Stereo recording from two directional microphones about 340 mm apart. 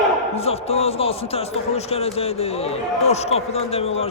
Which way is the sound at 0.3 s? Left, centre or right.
Centre.